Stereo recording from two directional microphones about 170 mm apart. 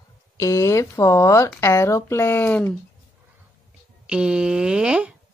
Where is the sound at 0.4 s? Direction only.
20° left (ahead or behind).